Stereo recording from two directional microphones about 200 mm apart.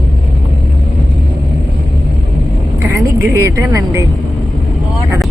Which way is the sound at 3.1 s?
15° right (ahead or behind).